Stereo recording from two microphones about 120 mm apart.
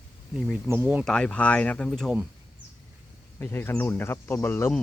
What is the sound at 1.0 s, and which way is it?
Speech, 5° left (ahead or behind).